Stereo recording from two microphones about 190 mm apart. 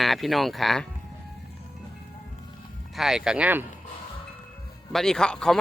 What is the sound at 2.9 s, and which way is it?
Speech, centre (ahead or behind).